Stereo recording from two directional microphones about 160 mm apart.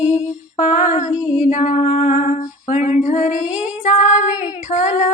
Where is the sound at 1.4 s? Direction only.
50° left (ahead or behind).